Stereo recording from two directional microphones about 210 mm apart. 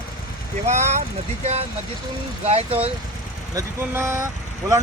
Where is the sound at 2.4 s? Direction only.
30° right (ahead or behind).